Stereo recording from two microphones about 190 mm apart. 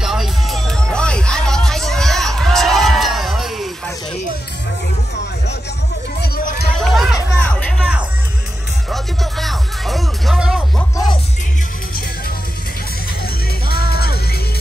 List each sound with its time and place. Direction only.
0.0 s music: centre (ahead or behind)
6.2 s music: 55° left (ahead or behind)
6.8 s music: centre (ahead or behind)
8.9 s music: centre (ahead or behind)
13.7 s music: 55° left (ahead or behind)